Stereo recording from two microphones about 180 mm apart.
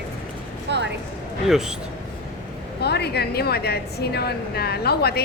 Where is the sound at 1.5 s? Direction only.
Centre (ahead or behind).